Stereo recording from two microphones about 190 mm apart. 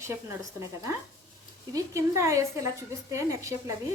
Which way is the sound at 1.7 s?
15° right (ahead or behind).